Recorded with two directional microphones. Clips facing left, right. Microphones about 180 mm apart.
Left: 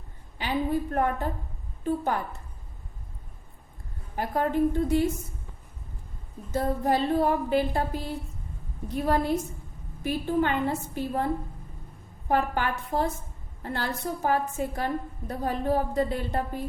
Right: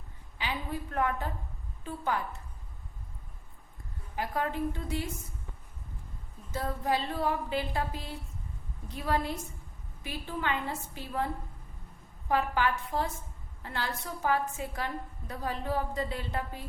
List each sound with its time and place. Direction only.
0.3 s a woman's voice: 50° left (ahead or behind)
4.1 s a woman's voice: 50° left (ahead or behind)
6.5 s a woman's voice: 45° left (ahead or behind)
12.3 s a woman's voice: 50° left (ahead or behind)